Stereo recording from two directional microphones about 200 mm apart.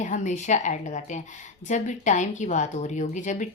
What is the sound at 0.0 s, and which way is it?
Speech, 40° left (ahead or behind).